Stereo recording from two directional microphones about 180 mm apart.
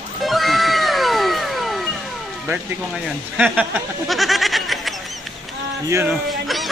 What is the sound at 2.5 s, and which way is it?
Speech, 5° right (ahead or behind).